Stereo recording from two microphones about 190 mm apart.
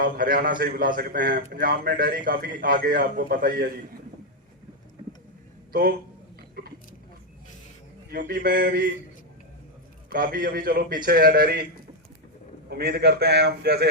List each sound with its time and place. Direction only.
0.0 s a man's voice: 50° right (ahead or behind)
5.7 s a man's voice: 50° right (ahead or behind)
6.6 s a sound: 50° right (ahead or behind)
8.1 s a man's voice: 50° right (ahead or behind)
10.1 s a man's voice: 50° right (ahead or behind)
12.6 s a man's voice: 55° right (ahead or behind)